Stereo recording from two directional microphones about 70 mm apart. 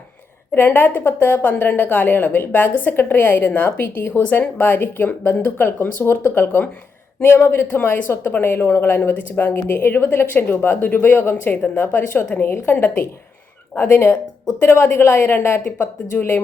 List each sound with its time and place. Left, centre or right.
0.5 s a woman's voice: left